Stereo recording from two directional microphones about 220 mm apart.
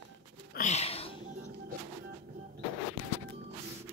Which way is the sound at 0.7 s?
30° left (ahead or behind).